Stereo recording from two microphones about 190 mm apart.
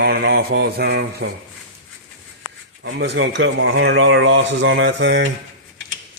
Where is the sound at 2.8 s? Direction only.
65° right (ahead or behind).